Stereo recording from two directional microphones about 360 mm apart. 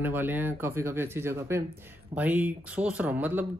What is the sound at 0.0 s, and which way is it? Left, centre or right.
Speech, centre.